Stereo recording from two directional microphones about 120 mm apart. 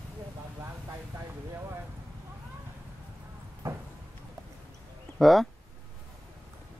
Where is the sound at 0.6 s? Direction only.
20° right (ahead or behind).